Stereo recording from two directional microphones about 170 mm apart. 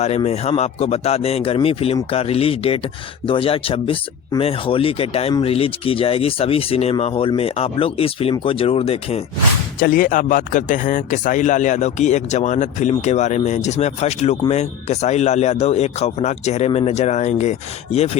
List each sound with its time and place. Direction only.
0.3 s speech: 40° left (ahead or behind)
9.8 s speech: 55° left (ahead or behind); by 18.2 s 40° left (ahead or behind)